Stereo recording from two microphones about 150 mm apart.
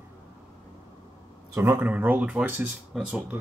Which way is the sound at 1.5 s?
15° right (ahead or behind).